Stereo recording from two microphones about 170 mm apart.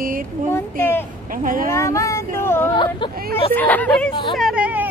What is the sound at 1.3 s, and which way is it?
Speech, 55° right (ahead or behind).